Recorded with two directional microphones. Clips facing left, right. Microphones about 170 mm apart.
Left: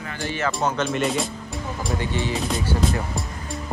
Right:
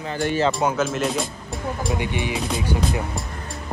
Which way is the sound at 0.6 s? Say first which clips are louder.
Right 1 dB; 5° right (ahead or behind).